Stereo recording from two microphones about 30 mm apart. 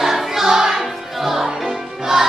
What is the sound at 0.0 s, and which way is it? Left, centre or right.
Music, centre.